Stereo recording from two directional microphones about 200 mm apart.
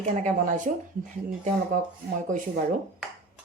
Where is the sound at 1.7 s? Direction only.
40° right (ahead or behind).